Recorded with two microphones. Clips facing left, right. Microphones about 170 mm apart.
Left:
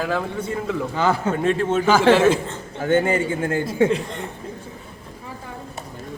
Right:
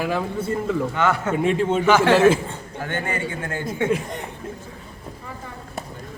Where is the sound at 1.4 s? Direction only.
15° right (ahead or behind).